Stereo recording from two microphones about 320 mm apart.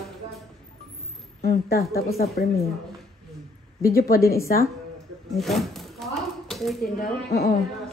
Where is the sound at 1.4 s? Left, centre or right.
Left.